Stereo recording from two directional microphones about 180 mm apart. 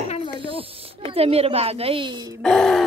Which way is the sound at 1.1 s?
35° right (ahead or behind).